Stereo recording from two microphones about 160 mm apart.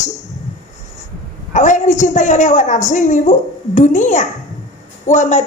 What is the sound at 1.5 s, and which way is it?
Speech, 50° left (ahead or behind).